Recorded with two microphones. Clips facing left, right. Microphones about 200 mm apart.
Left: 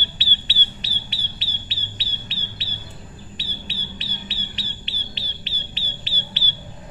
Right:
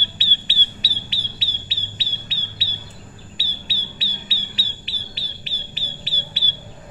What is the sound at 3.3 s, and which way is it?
Bird, 5° right (ahead or behind).